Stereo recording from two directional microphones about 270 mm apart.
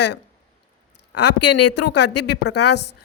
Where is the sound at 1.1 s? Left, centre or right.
Left.